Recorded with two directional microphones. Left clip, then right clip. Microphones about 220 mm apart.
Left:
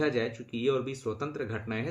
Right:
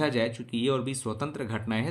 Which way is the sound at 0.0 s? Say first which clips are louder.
Right 2 dB; 50° right (ahead or behind).